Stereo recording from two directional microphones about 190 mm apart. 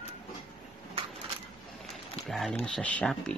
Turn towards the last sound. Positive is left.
turn(degrees=5)  # may be behind; listen again after turning